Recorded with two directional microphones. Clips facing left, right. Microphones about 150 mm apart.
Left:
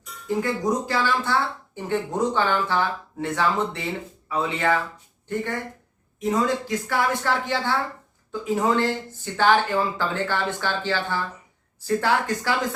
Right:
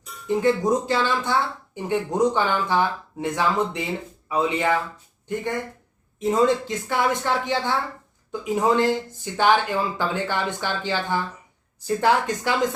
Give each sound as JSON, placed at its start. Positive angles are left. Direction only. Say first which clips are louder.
{"t": 0.3, "sound": "speech", "louder": "right 4 dB", "side_deg": -25}
{"t": 6.1, "sound": "a woman's voice", "louder": "right 3 dB", "side_deg": -25}